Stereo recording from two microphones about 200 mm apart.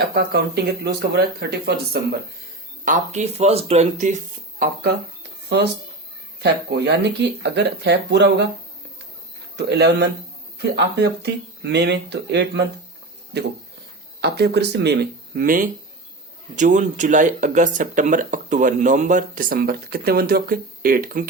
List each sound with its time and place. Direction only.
0.1 s speech: 50° right (ahead or behind)
2.8 s speech: 40° right (ahead or behind)
6.4 s speech: 55° right (ahead or behind)
9.6 s speech: 55° right (ahead or behind)
15.4 s speech: 45° right (ahead or behind)